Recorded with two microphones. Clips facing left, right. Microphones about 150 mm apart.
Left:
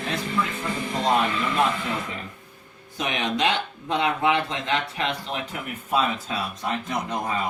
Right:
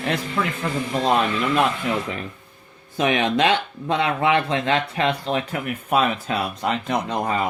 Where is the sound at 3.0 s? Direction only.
60° right (ahead or behind).